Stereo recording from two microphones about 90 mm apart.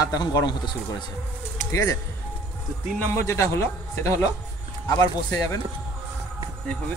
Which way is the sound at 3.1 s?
30° left (ahead or behind).